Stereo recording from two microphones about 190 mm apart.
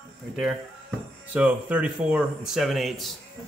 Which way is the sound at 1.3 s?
5° right (ahead or behind).